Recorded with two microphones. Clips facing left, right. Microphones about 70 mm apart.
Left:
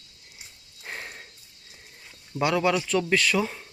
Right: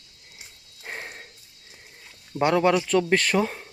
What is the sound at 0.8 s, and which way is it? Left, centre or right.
Clip-clop, right.